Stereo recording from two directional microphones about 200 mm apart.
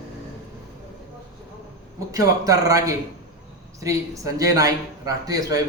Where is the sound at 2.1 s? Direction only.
15° right (ahead or behind).